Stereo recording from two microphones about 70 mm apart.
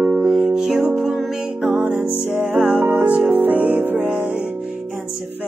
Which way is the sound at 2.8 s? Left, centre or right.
Right.